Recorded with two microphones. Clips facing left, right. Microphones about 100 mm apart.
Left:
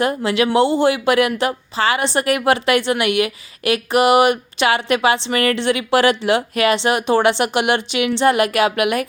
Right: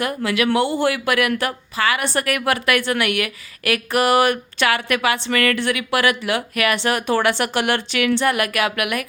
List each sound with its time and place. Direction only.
0.0 s speech: 25° left (ahead or behind)